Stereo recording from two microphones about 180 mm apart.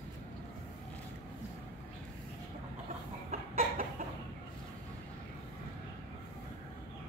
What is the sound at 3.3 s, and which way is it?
Chicken, 50° right (ahead or behind).